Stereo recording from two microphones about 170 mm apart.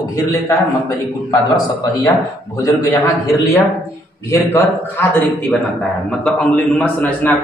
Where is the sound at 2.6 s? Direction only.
20° left (ahead or behind).